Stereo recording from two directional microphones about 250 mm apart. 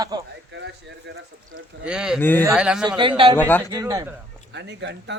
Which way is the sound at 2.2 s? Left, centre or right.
Centre.